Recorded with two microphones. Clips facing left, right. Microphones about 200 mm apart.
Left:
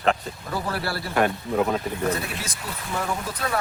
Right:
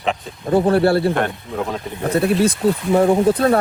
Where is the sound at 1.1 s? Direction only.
5° left (ahead or behind).